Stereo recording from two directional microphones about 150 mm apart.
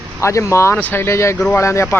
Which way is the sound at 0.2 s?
20° left (ahead or behind).